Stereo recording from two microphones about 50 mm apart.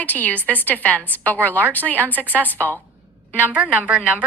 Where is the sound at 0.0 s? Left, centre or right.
Left.